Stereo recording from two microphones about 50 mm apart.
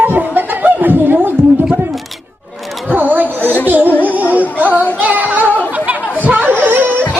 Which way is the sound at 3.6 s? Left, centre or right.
Right.